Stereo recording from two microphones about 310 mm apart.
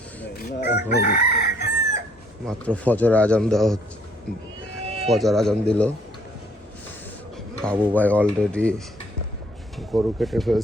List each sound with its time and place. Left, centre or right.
0.3 s chicken: left
2.5 s a man's voice: centre
5.1 s a man's voice: centre
7.6 s a man's voice: centre
9.7 s a man's voice: centre